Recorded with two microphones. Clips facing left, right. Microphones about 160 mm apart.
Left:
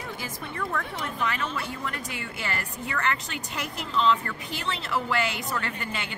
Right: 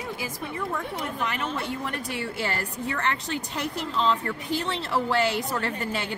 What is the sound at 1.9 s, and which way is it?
A woman's voice, 35° right (ahead or behind).